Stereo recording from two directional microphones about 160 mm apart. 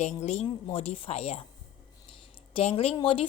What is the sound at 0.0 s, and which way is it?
A woman's voice, 45° left (ahead or behind).